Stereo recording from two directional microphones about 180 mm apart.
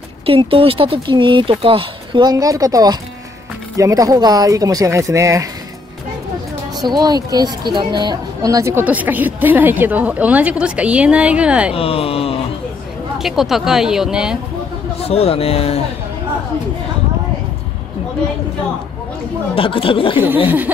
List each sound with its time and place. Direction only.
0.3 s speech: 30° right (ahead or behind)
6.8 s a woman's voice: 20° right (ahead or behind)
11.7 s a man's voice: 30° left (ahead or behind)
13.2 s speech: centre (ahead or behind)
15.0 s a man's voice: 35° left (ahead or behind)
19.5 s speech: 30° left (ahead or behind)
20.4 s a woman's voice: 10° right (ahead or behind)